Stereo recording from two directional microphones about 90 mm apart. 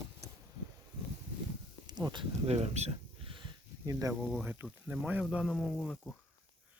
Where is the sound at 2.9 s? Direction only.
75° right (ahead or behind).